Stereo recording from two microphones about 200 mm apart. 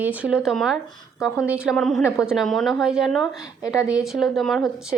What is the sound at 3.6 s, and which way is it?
Speech, 15° left (ahead or behind).